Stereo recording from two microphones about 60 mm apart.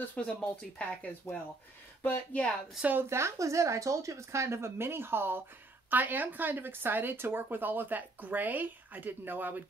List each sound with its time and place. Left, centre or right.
0.1 s speech: left
1.3 s speech: left
2.3 s speech: left
3.0 s speech: right